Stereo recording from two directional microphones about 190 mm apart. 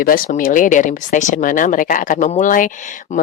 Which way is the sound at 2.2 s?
40° left (ahead or behind).